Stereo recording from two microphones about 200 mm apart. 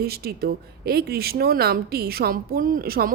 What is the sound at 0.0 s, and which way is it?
Speech, 50° right (ahead or behind).